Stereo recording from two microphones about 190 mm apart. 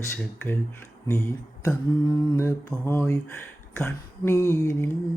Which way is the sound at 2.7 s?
5° left (ahead or behind).